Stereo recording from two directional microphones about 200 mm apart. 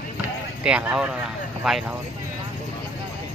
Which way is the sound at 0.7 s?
5° right (ahead or behind).